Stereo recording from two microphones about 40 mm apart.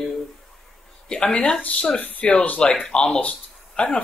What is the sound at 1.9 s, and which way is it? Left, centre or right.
Speech, left.